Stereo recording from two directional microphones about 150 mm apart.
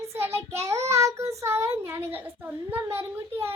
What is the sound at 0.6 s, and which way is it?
Child singing, 20° right (ahead or behind).